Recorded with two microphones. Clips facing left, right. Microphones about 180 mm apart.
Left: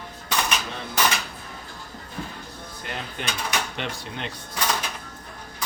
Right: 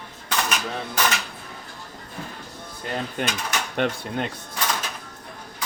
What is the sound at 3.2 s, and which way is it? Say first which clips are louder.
Speech: right 2 dB; 45° right (ahead or behind).